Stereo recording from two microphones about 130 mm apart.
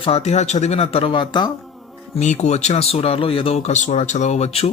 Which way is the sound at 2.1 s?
60° left (ahead or behind).